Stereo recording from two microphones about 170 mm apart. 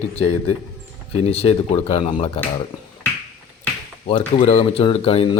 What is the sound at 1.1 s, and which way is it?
Speech, 35° left (ahead or behind).